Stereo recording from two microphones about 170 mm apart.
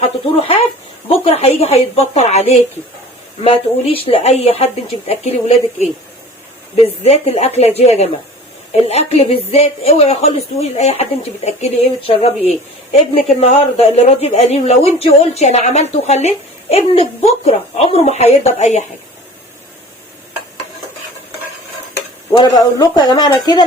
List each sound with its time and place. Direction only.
0.0 s a woman's voice: 35° left (ahead or behind)
6.8 s a woman's voice: 40° left (ahead or behind)
22.3 s speech: 20° left (ahead or behind)